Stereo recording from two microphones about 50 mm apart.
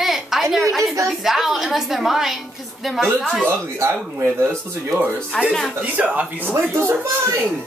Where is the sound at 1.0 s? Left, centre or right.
Centre.